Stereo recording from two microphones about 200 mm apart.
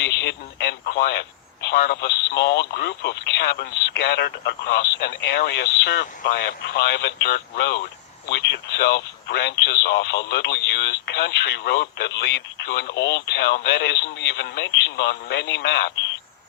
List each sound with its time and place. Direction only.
0.0 s radio: 60° left (ahead or behind)
1.6 s speech: 55° left (ahead or behind)